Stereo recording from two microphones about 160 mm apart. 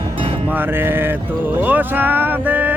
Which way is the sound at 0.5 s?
15° right (ahead or behind).